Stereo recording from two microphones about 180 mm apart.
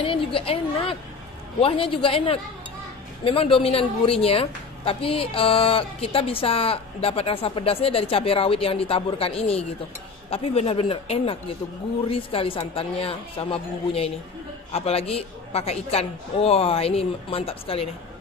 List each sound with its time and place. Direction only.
0.0 s a woman's voice: 30° left (ahead or behind)